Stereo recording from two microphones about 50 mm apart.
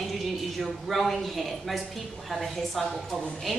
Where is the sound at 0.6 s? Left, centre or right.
Centre.